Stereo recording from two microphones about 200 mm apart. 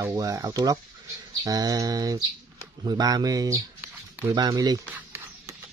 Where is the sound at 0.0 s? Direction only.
15° right (ahead or behind).